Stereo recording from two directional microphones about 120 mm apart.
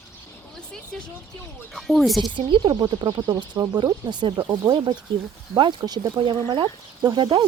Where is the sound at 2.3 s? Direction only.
40° right (ahead or behind).